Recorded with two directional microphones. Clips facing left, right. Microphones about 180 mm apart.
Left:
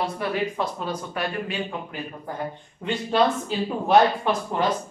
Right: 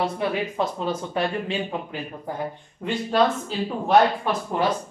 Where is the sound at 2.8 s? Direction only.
Centre (ahead or behind).